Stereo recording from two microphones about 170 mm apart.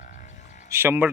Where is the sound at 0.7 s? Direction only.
15° right (ahead or behind).